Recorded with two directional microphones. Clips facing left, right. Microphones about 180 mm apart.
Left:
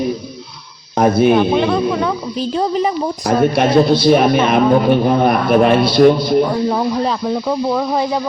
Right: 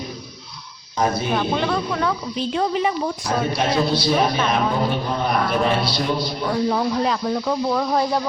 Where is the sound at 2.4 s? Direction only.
35° left (ahead or behind).